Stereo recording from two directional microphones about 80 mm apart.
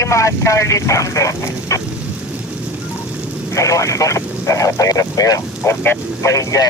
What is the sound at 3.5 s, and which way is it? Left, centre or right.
Speech, left.